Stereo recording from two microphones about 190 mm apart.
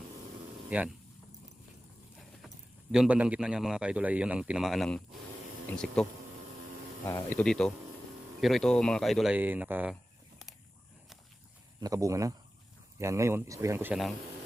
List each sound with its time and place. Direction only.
0.7 s speech: 5° right (ahead or behind)
2.9 s a man's voice: 5° right (ahead or behind)
9.9 s a sound: centre (ahead or behind)
11.8 s speech: 15° right (ahead or behind)